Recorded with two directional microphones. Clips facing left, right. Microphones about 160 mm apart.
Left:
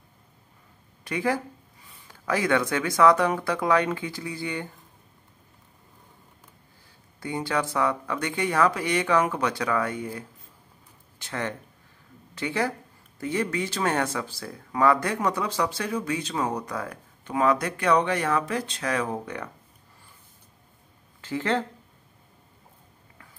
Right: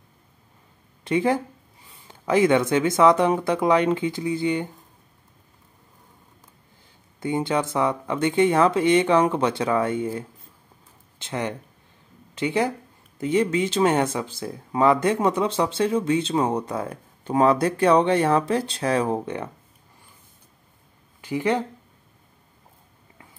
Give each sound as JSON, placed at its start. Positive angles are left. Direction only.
{"t": 1.0, "sound": "speech", "side_deg": -25}
{"t": 7.2, "sound": "speech", "side_deg": -20}
{"t": 21.2, "sound": "speech", "side_deg": -15}